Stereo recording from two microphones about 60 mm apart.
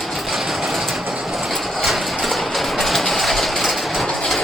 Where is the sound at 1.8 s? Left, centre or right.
Centre.